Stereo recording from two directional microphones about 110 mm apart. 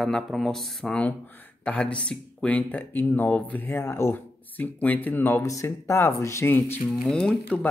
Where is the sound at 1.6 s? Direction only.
10° left (ahead or behind).